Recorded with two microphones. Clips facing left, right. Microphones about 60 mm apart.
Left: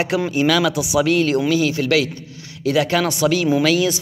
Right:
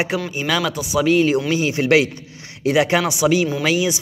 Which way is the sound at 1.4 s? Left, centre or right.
Right.